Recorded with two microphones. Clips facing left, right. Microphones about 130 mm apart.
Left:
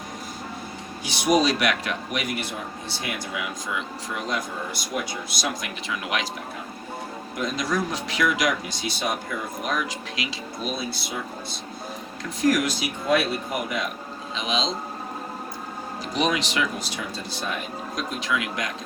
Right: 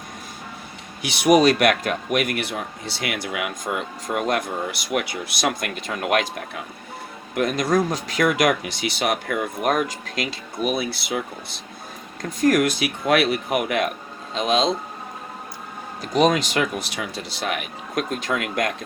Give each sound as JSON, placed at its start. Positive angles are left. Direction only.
{"t": 1.0, "sound": "speech", "side_deg": -65}
{"t": 3.8, "sound": "speech", "side_deg": -50}
{"t": 7.3, "sound": "speech", "side_deg": -60}
{"t": 12.4, "sound": "speech", "side_deg": -55}
{"t": 14.3, "sound": "speech", "side_deg": -50}
{"t": 16.1, "sound": "speech", "side_deg": -45}
{"t": 18.1, "sound": "speech", "side_deg": -50}